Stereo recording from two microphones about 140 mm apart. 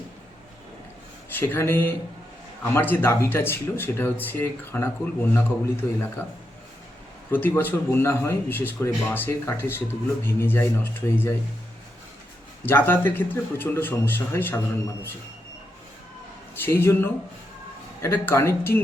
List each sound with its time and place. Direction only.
1.3 s speech: 15° left (ahead or behind)
7.3 s speech: 15° left (ahead or behind)
12.6 s speech: 15° left (ahead or behind)
16.6 s speech: 15° left (ahead or behind)